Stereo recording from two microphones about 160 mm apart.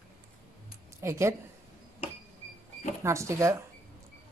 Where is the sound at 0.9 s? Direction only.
15° right (ahead or behind).